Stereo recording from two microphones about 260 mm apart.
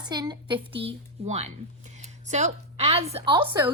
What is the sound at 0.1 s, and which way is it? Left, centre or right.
A woman's voice, centre.